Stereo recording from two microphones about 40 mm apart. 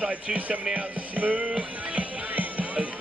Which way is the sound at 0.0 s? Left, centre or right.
Right.